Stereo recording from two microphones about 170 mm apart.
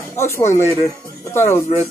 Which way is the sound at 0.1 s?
15° left (ahead or behind).